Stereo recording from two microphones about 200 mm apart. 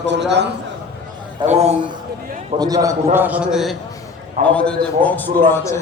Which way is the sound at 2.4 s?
20° right (ahead or behind).